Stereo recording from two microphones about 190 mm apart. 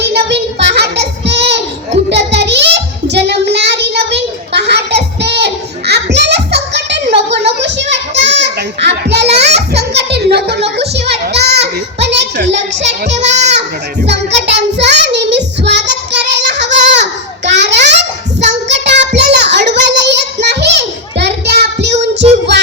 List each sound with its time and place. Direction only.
0.0 s child singing: 60° right (ahead or behind)
7.6 s children playing: 65° right (ahead or behind)
9.6 s music: 60° right (ahead or behind)
11.1 s a sound: 60° right (ahead or behind)
11.9 s child singing: 65° right (ahead or behind)
12.8 s music: 35° right (ahead or behind)
14.1 s child singing: 65° right (ahead or behind)
21.9 s child singing: 35° right (ahead or behind)